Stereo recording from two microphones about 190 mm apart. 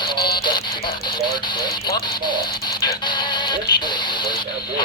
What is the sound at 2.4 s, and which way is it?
Speech, 55° left (ahead or behind).